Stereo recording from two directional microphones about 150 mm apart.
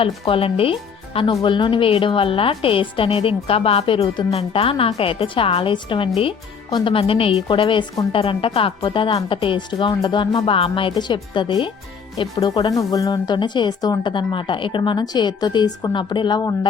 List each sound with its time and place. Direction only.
0.0 s a woman's voice: 40° left (ahead or behind)